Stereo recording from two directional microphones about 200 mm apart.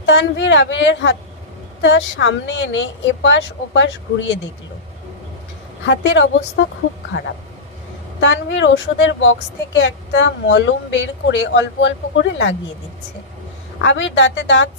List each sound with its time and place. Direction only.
0.0 s a woman's voice: 60° left (ahead or behind)
5.8 s a woman's voice: 65° left (ahead or behind)
8.2 s a woman's voice: 65° left (ahead or behind)
13.8 s a woman's voice: 65° left (ahead or behind)